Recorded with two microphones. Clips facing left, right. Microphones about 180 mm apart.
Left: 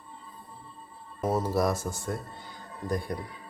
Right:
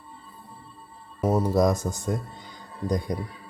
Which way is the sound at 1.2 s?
15° right (ahead or behind).